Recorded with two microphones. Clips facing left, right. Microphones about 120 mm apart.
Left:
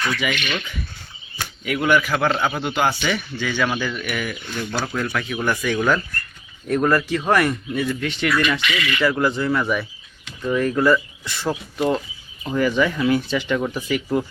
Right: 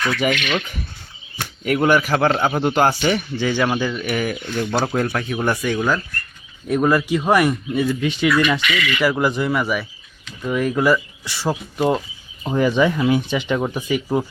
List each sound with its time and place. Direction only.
0.0 s speech: 45° right (ahead or behind)
0.3 s speech: 75° right (ahead or behind)
1.6 s speech: 40° right (ahead or behind); by 3.9 s 25° right (ahead or behind)
4.0 s speech: 35° right (ahead or behind)
5.6 s speech: 10° right (ahead or behind)
12.4 s speech: 25° right (ahead or behind)